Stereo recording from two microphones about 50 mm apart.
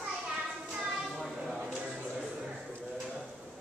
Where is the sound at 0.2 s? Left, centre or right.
Centre.